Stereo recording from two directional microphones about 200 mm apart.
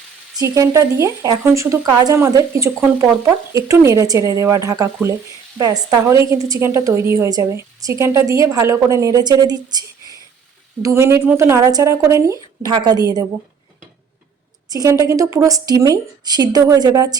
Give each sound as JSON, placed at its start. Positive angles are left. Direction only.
{"t": 0.3, "sound": "a woman's voice", "side_deg": -15}
{"t": 10.8, "sound": "a woman's voice", "side_deg": -15}
{"t": 14.7, "sound": "a woman's voice", "side_deg": -15}